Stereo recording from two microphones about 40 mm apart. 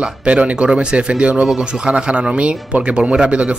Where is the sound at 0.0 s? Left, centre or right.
Right.